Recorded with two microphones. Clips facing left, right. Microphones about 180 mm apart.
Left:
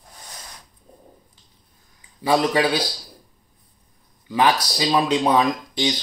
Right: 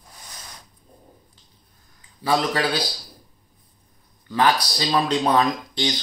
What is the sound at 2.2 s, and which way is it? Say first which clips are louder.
Speech: left 3 dB; 15° left (ahead or behind).